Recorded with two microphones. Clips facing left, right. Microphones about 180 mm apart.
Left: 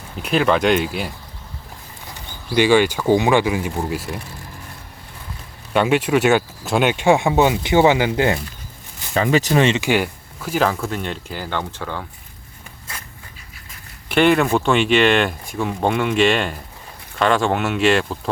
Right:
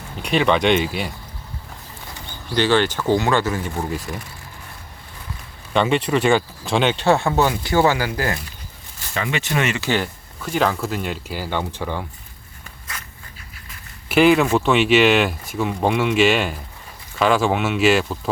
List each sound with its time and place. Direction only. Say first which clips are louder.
0.2 s speech: left 1 dB; centre (ahead or behind)
2.6 s speech: left 3 dB; 10° left (ahead or behind)
5.7 s speech: left 2 dB; 5° left (ahead or behind)
9.1 s speech: left 7 dB; 40° left (ahead or behind)
9.7 s speech: left 3 dB; 15° left (ahead or behind); by 12.0 s 10° right (ahead or behind)
14.1 s speech: right 1 dB; centre (ahead or behind)